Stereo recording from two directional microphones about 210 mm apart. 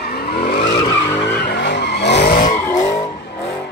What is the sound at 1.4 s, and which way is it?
Vehicle, 55° left (ahead or behind).